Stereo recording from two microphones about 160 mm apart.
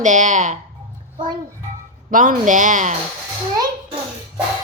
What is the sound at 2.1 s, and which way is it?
Speech, 55° right (ahead or behind).